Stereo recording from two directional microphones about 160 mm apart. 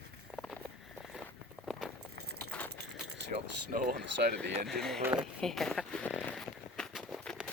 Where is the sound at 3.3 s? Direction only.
50° right (ahead or behind).